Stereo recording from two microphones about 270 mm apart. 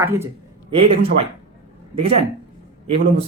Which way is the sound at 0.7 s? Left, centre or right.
Right.